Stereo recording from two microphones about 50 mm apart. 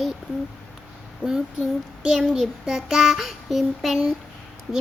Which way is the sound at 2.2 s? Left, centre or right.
Centre.